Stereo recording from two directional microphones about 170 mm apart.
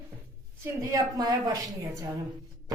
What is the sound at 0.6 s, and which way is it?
A woman's voice, 20° right (ahead or behind).